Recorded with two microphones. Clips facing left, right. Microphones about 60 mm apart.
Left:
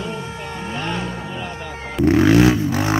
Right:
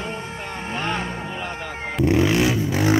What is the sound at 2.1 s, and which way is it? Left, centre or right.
Vehicle, left.